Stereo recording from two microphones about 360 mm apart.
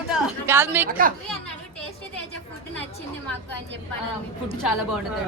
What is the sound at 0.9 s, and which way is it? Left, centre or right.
Speech, right.